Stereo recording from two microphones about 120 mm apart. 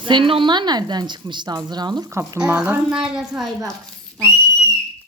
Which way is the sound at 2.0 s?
25° right (ahead or behind).